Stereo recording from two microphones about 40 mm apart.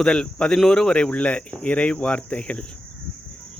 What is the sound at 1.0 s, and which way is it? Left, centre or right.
Speech, left.